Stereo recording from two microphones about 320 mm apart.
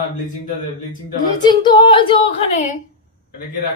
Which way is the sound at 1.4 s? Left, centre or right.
Centre.